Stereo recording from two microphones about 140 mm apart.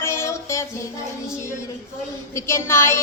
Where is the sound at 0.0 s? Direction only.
20° left (ahead or behind).